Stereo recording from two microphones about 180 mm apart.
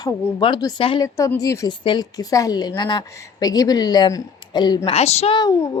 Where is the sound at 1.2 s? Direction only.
20° left (ahead or behind).